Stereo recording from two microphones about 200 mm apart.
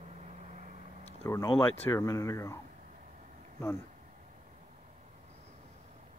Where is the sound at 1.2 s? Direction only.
15° left (ahead or behind).